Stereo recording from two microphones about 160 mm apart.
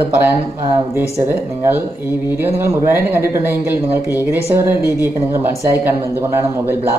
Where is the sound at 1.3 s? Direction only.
15° right (ahead or behind).